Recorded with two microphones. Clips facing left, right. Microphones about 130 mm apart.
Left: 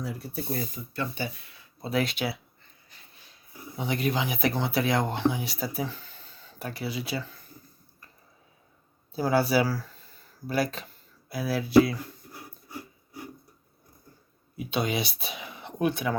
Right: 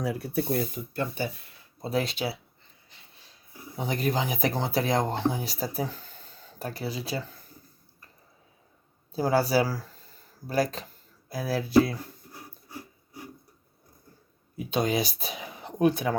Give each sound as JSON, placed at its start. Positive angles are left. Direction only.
{"t": 0.0, "sound": "speech", "side_deg": -70}
{"t": 1.8, "sound": "speech", "side_deg": -35}
{"t": 3.8, "sound": "speech", "side_deg": -40}
{"t": 9.1, "sound": "speech", "side_deg": -35}
{"t": 14.5, "sound": "speech", "side_deg": -40}